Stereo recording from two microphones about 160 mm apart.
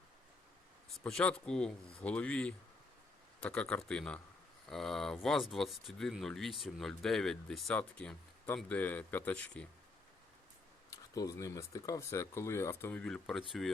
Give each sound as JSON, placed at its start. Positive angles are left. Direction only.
{"t": 1.0, "sound": "speech", "side_deg": 5}
{"t": 10.9, "sound": "speech", "side_deg": 20}